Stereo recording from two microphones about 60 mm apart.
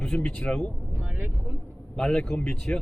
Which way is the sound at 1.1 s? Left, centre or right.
Right.